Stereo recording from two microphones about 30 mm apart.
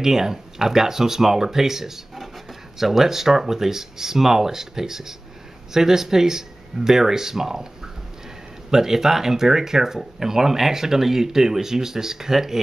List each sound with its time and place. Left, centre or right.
0.0 s speech: centre
8.6 s speech: centre